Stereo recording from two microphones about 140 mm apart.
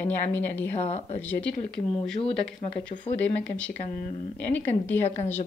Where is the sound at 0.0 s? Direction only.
15° left (ahead or behind).